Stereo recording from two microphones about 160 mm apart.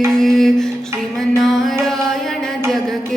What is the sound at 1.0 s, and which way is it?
Mantra, centre (ahead or behind).